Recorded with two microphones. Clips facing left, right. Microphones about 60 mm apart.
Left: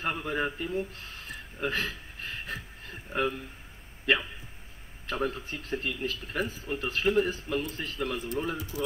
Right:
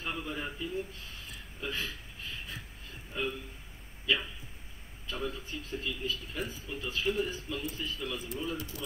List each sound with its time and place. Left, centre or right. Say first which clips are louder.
0.0 s speech: left 7 dB; left